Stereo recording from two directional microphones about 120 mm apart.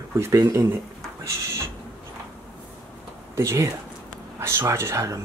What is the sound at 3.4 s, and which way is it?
Speech, 25° right (ahead or behind).